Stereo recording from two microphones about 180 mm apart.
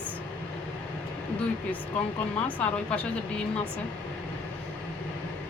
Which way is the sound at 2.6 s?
5° left (ahead or behind).